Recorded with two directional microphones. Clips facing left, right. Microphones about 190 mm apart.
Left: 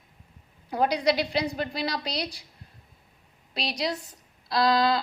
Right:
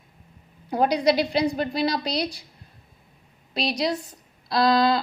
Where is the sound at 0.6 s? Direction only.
35° right (ahead or behind).